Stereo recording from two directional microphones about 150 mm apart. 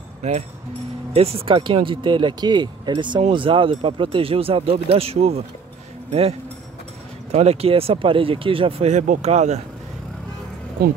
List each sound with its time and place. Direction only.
1.1 s speech: 40° right (ahead or behind)
7.2 s speech: 45° right (ahead or behind)
10.8 s speech: 80° right